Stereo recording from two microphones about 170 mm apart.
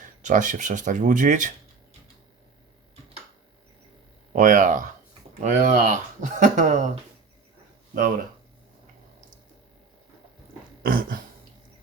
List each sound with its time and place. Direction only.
0.2 s speech: 45° right (ahead or behind)
4.4 s speech: 50° right (ahead or behind)
10.8 s a sound: 55° right (ahead or behind)